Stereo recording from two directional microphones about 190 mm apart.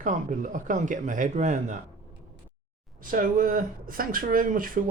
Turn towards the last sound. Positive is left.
turn(degrees=-45)  # may be behind; listen again after turning